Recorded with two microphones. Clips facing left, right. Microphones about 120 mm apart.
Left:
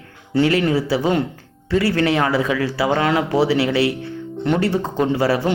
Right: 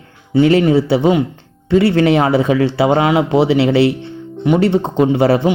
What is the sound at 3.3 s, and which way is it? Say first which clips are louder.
Speech: right 5 dB; 25° right (ahead or behind).